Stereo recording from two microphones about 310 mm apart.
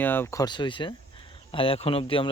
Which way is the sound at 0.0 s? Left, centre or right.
Centre.